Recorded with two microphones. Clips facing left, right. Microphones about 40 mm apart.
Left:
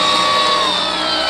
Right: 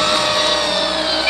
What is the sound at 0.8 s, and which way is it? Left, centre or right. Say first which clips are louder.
Music: even; centre.